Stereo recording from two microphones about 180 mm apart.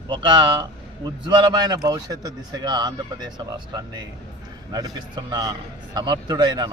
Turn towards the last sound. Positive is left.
turn(degrees=-25)  # may be behind; listen again after turning